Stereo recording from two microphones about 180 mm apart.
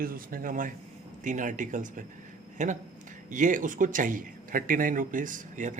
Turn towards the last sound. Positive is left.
turn(degrees=-45)  # may be behind; listen again after turning